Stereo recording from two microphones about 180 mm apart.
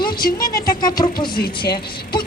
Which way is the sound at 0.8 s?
20° left (ahead or behind).